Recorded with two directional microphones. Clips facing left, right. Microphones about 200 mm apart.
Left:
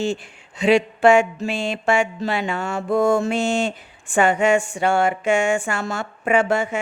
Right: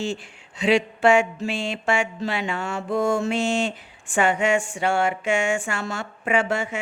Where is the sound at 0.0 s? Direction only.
45° left (ahead or behind).